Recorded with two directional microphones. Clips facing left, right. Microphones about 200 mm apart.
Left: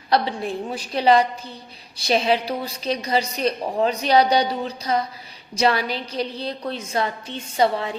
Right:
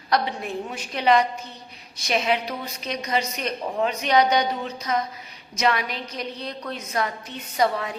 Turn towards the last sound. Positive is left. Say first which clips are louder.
# left 3 dB
turn(degrees=30)  # may be behind; listen again after turning